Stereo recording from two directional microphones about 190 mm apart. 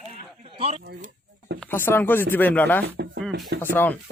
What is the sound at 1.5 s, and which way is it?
Speech, 5° left (ahead or behind).